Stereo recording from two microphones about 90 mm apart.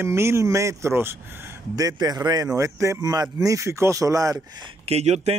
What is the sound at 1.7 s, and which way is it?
Speech, 45° right (ahead or behind).